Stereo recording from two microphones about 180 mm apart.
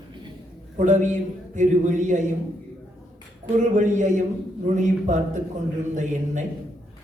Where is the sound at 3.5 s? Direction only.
45° right (ahead or behind).